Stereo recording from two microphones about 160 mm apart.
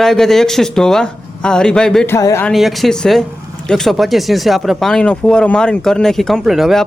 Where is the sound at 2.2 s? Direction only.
20° left (ahead or behind).